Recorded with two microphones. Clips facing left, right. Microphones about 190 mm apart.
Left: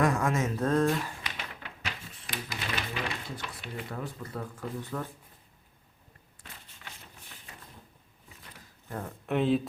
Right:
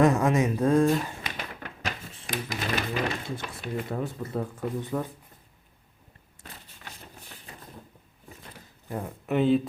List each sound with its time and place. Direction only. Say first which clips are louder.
0.0 s speech: right 6 dB; 20° right (ahead or behind)
1.2 s typewriter: right 4 dB; 50° right (ahead or behind)
3.4 s speech: right 6 dB; 45° right (ahead or behind)
3.9 s speech: right 6 dB; 25° right (ahead or behind)
6.4 s a sound: right 4 dB; 40° right (ahead or behind)
8.9 s speech: right 4 dB; 15° right (ahead or behind)
9.2 s speech: right 4 dB; centre (ahead or behind)